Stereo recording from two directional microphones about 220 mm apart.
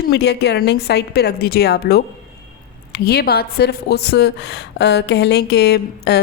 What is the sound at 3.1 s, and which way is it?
Speech, 45° left (ahead or behind).